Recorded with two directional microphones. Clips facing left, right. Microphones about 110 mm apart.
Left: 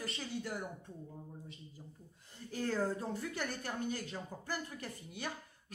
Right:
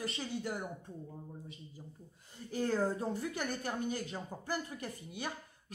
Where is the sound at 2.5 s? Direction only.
20° right (ahead or behind).